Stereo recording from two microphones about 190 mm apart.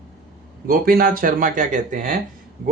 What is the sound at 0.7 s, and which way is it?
Speech, 50° right (ahead or behind).